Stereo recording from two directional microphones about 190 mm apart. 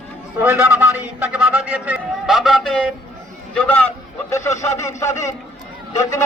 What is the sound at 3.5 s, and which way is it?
A man's voice, 5° left (ahead or behind).